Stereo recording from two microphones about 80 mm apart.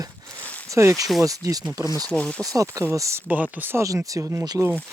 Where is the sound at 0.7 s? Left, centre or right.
Right.